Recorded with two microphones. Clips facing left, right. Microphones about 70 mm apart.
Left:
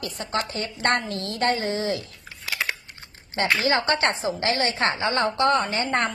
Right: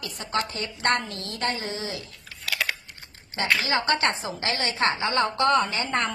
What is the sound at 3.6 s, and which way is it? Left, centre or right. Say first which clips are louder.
A woman's voice: left 3 dB; left.